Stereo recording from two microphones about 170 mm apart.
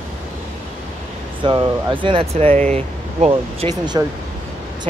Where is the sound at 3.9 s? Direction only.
25° right (ahead or behind).